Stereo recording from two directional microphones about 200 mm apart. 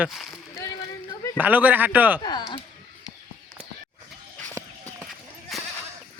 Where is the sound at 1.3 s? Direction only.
10° right (ahead or behind).